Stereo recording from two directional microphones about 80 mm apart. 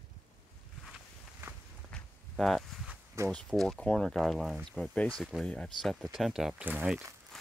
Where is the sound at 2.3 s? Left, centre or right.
Centre.